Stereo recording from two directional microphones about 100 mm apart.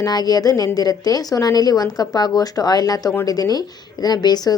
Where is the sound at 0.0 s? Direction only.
40° left (ahead or behind).